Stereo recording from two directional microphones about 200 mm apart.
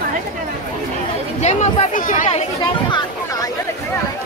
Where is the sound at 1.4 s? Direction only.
40° left (ahead or behind).